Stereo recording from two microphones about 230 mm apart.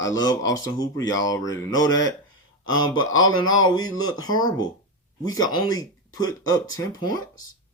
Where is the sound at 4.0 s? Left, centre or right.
Centre.